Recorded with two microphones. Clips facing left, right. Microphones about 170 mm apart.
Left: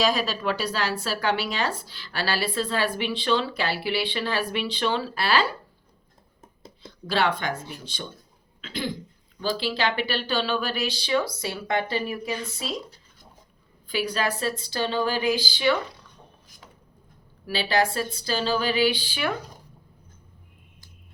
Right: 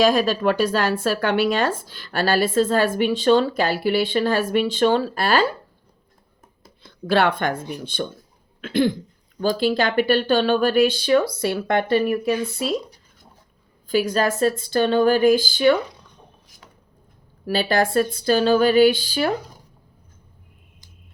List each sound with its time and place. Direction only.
0.0 s speech: 50° right (ahead or behind)
6.8 s speech: 55° right (ahead or behind)
13.8 s speech: 45° right (ahead or behind)
17.4 s speech: 50° right (ahead or behind)